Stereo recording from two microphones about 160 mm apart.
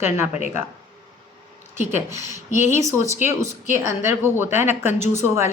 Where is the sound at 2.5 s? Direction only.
50° left (ahead or behind).